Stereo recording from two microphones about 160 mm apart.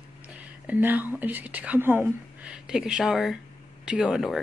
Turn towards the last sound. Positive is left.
turn(degrees=0)  # may be behind; listen again after turning